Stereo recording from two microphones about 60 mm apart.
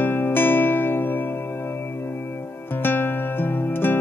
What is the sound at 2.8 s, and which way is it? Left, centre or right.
Music, left.